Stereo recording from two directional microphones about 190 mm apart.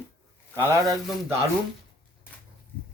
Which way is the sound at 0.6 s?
20° right (ahead or behind).